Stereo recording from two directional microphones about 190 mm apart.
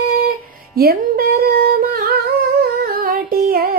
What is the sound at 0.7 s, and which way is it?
Singing, 55° right (ahead or behind).